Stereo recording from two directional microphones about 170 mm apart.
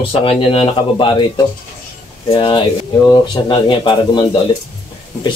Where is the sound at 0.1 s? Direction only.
30° left (ahead or behind).